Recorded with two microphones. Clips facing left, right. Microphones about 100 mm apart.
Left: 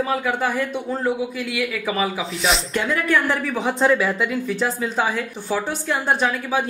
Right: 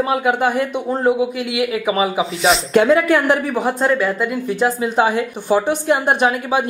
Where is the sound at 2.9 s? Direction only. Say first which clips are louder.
Right 5 dB; 65° right (ahead or behind).